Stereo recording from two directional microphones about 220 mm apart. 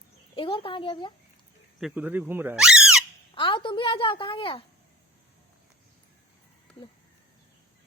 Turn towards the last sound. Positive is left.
turn(degrees=5)  # may be behind; listen again after turning